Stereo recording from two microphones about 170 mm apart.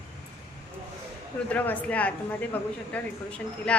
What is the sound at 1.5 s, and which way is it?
Speech, 10° left (ahead or behind).